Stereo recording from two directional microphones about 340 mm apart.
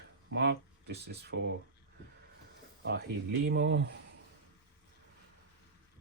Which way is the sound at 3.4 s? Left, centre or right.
Right.